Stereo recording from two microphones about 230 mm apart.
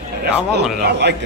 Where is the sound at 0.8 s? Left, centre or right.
Right.